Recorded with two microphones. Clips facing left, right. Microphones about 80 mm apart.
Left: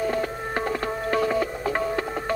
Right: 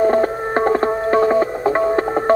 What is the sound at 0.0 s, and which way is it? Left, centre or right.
Music, right.